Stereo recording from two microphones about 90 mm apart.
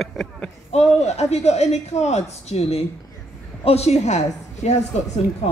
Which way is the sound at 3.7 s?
90° left.